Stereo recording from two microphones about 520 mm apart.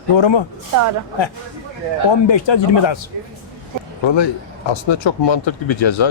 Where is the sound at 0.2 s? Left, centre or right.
Left.